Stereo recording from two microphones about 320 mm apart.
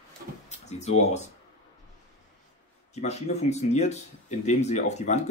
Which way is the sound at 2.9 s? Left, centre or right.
Left.